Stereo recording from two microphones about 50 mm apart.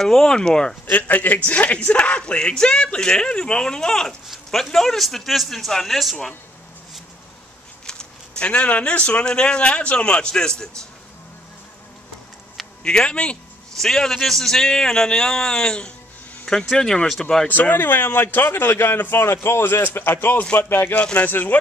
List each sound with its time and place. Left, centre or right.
0.0 s a man's voice: centre
0.9 s a man's voice: left; by 6.1 s centre
7.8 s a sound: centre
9.2 s speech: centre
12.8 s a man's voice: centre
13.7 s a man's voice: centre
17.5 s a man's voice: left
20.9 s speech: left
21.2 s speech: left